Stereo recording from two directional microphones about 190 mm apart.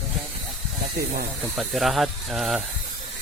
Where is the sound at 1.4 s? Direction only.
Centre (ahead or behind).